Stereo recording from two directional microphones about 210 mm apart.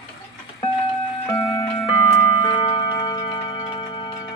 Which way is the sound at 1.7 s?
25° left (ahead or behind).